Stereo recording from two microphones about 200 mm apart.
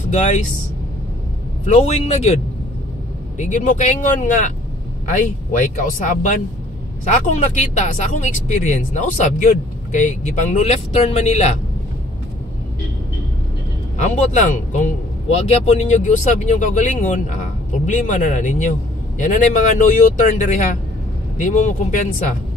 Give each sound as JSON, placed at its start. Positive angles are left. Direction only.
{"t": 0.1, "sound": "speech", "side_deg": 35}
{"t": 1.7, "sound": "speech", "side_deg": 35}
{"t": 13.9, "sound": "speech", "side_deg": 35}